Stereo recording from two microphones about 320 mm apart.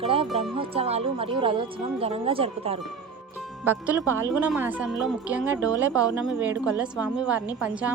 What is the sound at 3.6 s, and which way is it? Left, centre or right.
Speech, centre.